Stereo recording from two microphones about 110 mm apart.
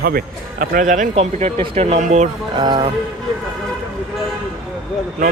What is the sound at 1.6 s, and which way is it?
Speech, 70° right (ahead or behind).